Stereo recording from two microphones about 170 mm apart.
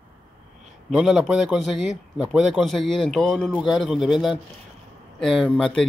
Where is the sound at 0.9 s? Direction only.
Centre (ahead or behind).